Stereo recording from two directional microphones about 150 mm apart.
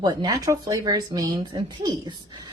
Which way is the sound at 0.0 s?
25° right (ahead or behind).